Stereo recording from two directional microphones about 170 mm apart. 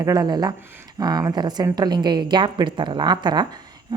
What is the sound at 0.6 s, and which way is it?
Speech, 10° right (ahead or behind).